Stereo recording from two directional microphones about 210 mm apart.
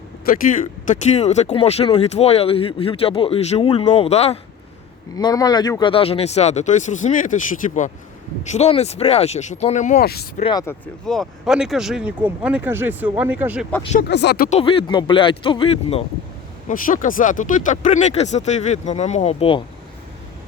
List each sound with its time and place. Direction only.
0.3 s speech: 40° left (ahead or behind)
5.1 s speech: 15° left (ahead or behind); by 10.4 s 45° left (ahead or behind)
10.4 s speech: 20° left (ahead or behind)
11.0 s speech: centre (ahead or behind)
14.1 s speech: 55° left (ahead or behind)
14.6 s speech: 25° left (ahead or behind)
16.6 s speech: 40° left (ahead or behind)